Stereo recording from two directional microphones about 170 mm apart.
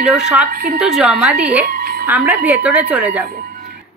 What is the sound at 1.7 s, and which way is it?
Music, 65° right (ahead or behind).